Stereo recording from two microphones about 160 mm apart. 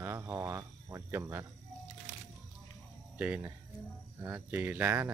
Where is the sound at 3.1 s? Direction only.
10° right (ahead or behind).